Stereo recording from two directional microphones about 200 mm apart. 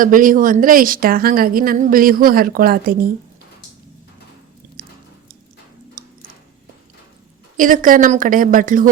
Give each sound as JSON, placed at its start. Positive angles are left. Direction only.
{"t": 0.0, "sound": "a woman's voice", "side_deg": -45}
{"t": 7.5, "sound": "a woman's voice", "side_deg": -40}